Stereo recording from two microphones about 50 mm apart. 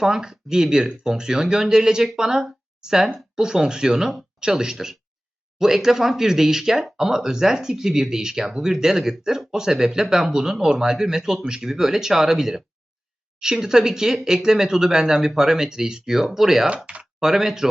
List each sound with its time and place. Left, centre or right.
0.0 s speech: centre
16.6 s speech: right
17.2 s speech: centre